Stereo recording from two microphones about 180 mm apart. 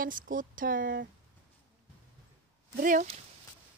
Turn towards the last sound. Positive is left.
turn(degrees=-50)  # may be behind; listen again after turning